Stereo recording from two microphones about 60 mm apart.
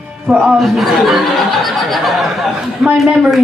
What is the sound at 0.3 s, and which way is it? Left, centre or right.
Speech, centre.